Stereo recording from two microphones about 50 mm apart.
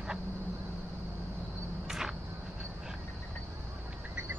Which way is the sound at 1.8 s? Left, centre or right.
Centre.